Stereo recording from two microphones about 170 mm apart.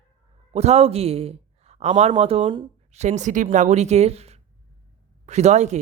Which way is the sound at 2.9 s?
45° right (ahead or behind).